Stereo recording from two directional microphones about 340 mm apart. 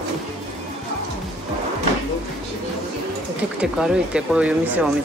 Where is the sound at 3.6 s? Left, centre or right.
Centre.